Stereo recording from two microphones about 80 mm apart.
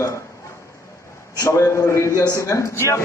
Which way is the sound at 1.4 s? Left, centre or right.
Left.